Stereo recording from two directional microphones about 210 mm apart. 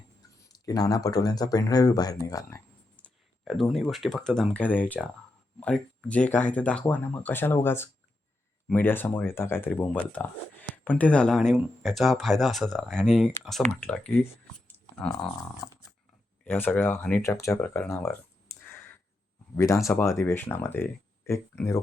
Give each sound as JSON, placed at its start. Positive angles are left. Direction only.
{"t": 0.4, "sound": "speech", "side_deg": 15}
{"t": 2.3, "sound": "a sound", "side_deg": 15}
{"t": 3.4, "sound": "speech", "side_deg": 0}
{"t": 16.4, "sound": "speech", "side_deg": 10}
{"t": 19.5, "sound": "speech", "side_deg": 15}